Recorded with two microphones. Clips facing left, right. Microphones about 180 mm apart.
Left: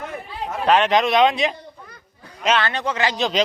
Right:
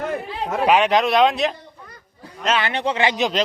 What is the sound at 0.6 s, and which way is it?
Speech, 10° right (ahead or behind).